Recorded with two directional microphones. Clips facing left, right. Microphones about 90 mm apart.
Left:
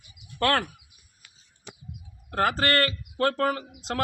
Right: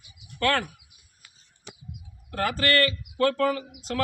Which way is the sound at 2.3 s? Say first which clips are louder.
Left 1 dB; 45° left (ahead or behind).